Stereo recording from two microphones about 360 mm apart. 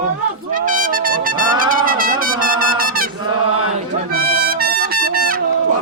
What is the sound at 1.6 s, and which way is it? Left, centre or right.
Brass instrument, right.